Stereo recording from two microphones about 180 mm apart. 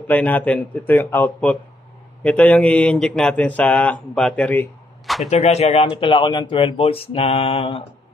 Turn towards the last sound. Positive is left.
turn(degrees=30)  # may be behind; listen again after turning